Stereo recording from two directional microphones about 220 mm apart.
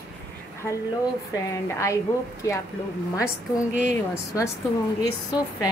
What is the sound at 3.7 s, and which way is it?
Speech, 35° right (ahead or behind).